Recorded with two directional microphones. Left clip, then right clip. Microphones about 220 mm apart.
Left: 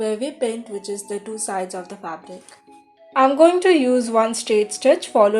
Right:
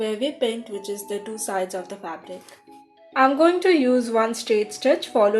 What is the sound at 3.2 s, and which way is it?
Speech, 30° left (ahead or behind).